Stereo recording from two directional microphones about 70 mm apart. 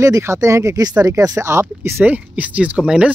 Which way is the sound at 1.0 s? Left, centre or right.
Right.